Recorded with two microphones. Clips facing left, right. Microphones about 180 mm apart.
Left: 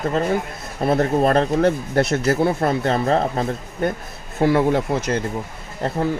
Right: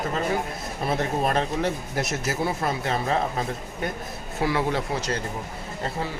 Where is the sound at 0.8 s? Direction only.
45° left (ahead or behind).